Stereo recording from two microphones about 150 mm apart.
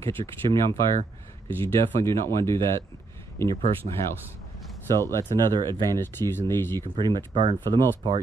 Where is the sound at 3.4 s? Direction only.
40° right (ahead or behind).